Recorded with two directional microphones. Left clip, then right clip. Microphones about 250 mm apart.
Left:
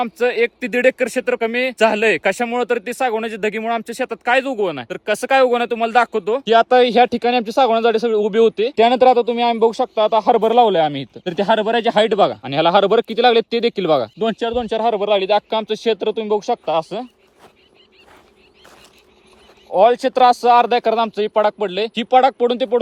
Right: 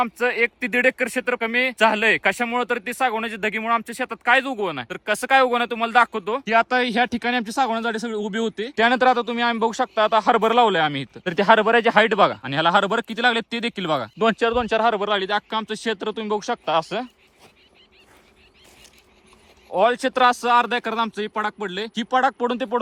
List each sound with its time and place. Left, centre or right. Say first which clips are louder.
0.0 s speech: left 3 dB; centre
6.7 s speech: left 8 dB; centre
9.6 s speech: left 6 dB; centre
10.0 s speech: left 3 dB; centre
11.2 s speech: right 1 dB; right
12.1 s speech: left 3 dB; centre
14.2 s speech: even; right
15.3 s speech: left 7 dB; centre
19.7 s speech: left 6 dB; centre